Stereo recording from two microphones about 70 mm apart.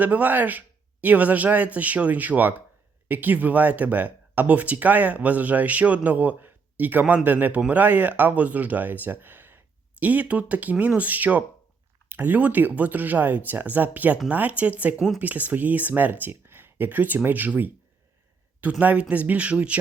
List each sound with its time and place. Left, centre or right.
0.0 s speech: right
14.9 s speech: centre
15.2 s speech: right